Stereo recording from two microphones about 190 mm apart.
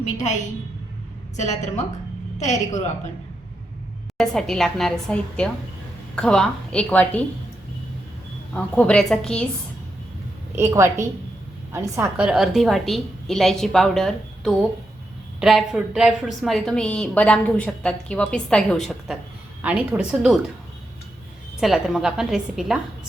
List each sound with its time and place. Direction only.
1.4 s a woman's voice: 40° left (ahead or behind)
4.2 s a woman's voice: centre (ahead or behind)
8.5 s a woman's voice: 5° left (ahead or behind)
10.5 s a woman's voice: 15° right (ahead or behind)
21.6 s a woman's voice: centre (ahead or behind)